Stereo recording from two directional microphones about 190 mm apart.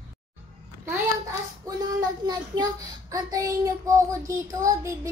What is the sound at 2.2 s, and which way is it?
A child's voice, 20° right (ahead or behind).